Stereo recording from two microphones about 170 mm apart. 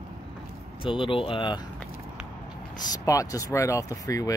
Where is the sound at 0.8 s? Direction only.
30° left (ahead or behind).